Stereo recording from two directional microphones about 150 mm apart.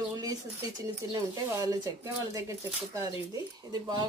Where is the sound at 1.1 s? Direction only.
25° right (ahead or behind).